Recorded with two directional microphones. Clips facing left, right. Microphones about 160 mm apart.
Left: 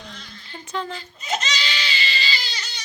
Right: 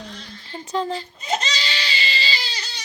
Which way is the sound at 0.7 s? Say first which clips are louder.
Right 5 dB; 30° right (ahead or behind).